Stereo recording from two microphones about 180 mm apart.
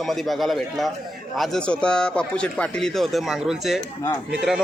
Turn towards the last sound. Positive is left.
turn(degrees=0)  # may be behind; listen again after turning